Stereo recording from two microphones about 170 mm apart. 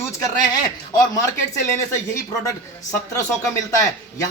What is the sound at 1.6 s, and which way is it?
A man's voice, 15° left (ahead or behind).